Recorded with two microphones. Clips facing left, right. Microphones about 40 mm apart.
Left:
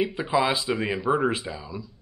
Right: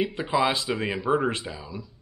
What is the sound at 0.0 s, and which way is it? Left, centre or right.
Speech, centre.